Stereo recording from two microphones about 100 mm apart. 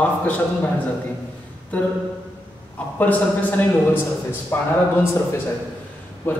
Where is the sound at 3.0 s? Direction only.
15° left (ahead or behind).